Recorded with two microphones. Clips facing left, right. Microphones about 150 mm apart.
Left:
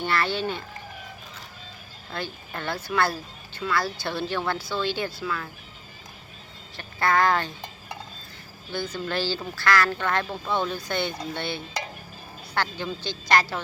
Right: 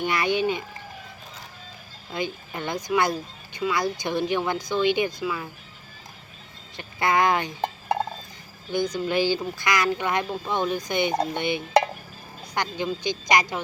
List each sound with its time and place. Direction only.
0.0 s speech: 15° right (ahead or behind)
2.0 s speech: 15° right (ahead or behind)
6.7 s speech: 20° right (ahead or behind)
7.6 s a sound: 60° right (ahead or behind)
8.7 s speech: 15° right (ahead or behind)